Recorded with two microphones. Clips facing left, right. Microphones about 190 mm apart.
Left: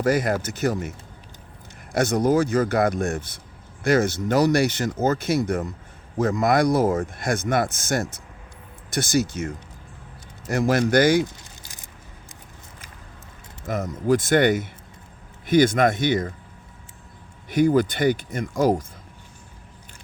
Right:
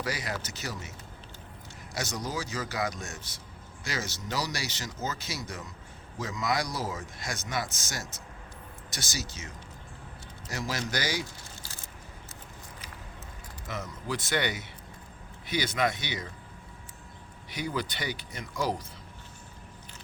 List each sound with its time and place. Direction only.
0.0 s speech: 50° left (ahead or behind)
10.5 s speech: 55° left (ahead or behind)
11.6 s a sound: 15° left (ahead or behind)
13.7 s speech: 50° left (ahead or behind)
17.5 s speech: 50° left (ahead or behind)